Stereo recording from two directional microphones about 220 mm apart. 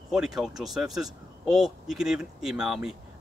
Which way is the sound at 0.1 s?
5° right (ahead or behind).